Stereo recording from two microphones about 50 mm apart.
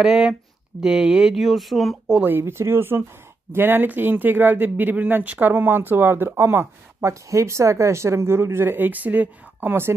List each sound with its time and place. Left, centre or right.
0.0 s speech: centre
1.3 s speech: centre
2.2 s speech: right
5.5 s speech: right
8.7 s speech: right